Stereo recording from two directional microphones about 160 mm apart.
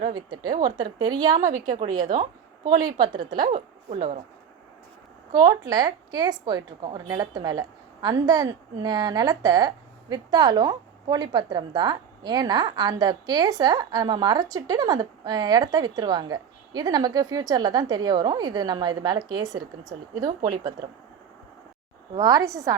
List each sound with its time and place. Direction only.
0.1 s a woman's voice: 25° right (ahead or behind)
1.5 s a woman's voice: 50° right (ahead or behind)
2.6 s a woman's voice: 25° right (ahead or behind)
3.8 s a woman's voice: 50° right (ahead or behind)
5.3 s a woman's voice: 25° right (ahead or behind)
22.1 s a woman's voice: 25° right (ahead or behind)